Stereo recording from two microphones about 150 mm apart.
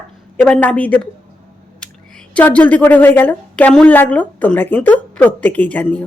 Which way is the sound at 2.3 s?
10° left (ahead or behind).